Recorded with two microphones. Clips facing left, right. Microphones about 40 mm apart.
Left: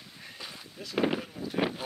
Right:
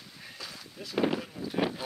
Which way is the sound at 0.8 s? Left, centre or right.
Centre.